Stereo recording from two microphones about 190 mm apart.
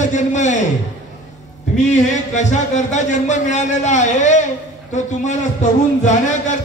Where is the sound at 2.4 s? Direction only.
40° left (ahead or behind).